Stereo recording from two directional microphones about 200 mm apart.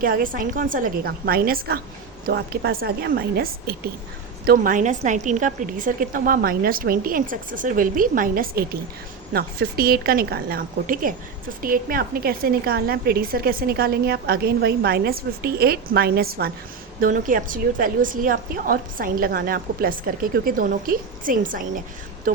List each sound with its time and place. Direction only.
0.0 s a woman's voice: 45° right (ahead or behind)